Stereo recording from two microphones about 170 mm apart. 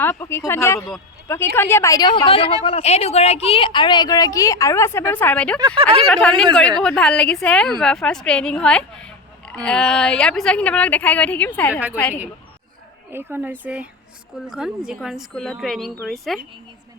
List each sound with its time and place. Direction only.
0.0 s a woman's voice: 15° left (ahead or behind)
5.5 s speech: 30° right (ahead or behind)
6.0 s speech: 5° left (ahead or behind)
11.7 s speech: 10° right (ahead or behind)
11.9 s speech: 10° left (ahead or behind)
13.1 s speech: 10° right (ahead or behind)